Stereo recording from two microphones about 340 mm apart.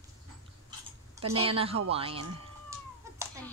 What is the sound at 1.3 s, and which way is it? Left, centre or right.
Speech, centre.